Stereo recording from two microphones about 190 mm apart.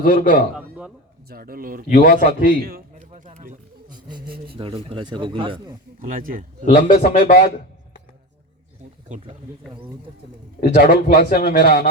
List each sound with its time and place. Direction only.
0.0 s a man's voice: 50° left (ahead or behind)
0.5 s a sound: 5° right (ahead or behind)
1.3 s speech: 50° right (ahead or behind)
1.9 s a man's voice: 50° left (ahead or behind)
2.6 s speech: 50° right (ahead or behind)
3.1 s music: 40° right (ahead or behind)
3.8 s a sound: 20° right (ahead or behind)
4.5 s speech: 30° right (ahead or behind)
6.0 s speech: 45° right (ahead or behind)
6.7 s a man's voice: 55° left (ahead or behind)
9.0 s speech: 40° right (ahead or behind)
10.6 s a man's voice: 55° left (ahead or behind)